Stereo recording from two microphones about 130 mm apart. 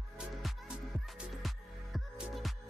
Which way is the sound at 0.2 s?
Centre (ahead or behind).